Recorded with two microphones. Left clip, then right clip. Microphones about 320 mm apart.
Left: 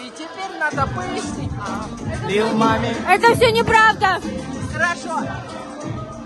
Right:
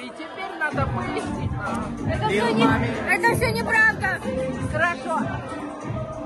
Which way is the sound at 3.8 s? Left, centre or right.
Centre.